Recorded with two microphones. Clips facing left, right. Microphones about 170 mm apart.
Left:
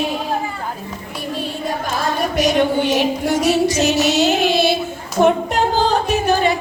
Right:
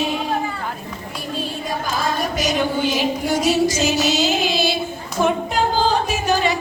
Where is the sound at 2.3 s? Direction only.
65° left (ahead or behind).